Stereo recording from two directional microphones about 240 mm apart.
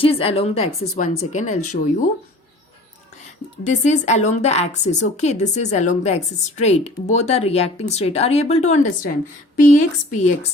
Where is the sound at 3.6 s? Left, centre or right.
Left.